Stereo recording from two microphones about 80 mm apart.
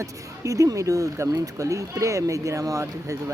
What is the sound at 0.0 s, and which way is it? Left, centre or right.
Speech, right.